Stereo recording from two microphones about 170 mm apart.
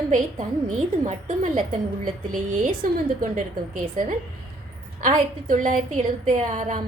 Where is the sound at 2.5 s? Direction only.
50° right (ahead or behind).